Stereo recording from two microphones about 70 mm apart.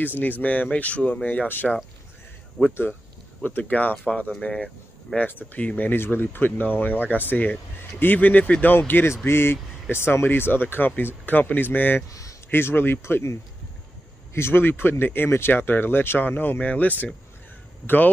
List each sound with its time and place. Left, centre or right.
0.0 s speech: left
12.1 s a sound: left
12.4 s speech: left